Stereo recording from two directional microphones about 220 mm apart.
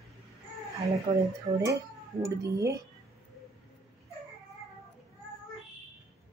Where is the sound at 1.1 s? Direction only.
20° right (ahead or behind).